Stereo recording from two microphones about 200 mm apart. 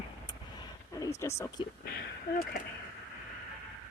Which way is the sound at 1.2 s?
15° left (ahead or behind).